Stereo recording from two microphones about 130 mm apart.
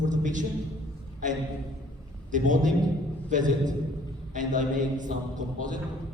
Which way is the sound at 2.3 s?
80° right.